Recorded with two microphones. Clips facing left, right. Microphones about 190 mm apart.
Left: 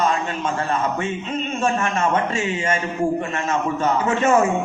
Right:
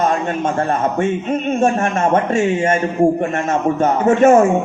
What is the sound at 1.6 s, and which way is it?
A man's voice, 50° right (ahead or behind).